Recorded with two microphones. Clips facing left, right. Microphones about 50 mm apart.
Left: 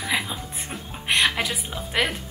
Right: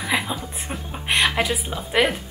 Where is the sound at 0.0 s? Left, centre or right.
Centre.